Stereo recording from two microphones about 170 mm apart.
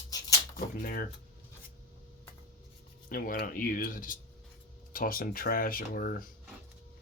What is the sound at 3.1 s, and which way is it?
Speech, 60° left (ahead or behind).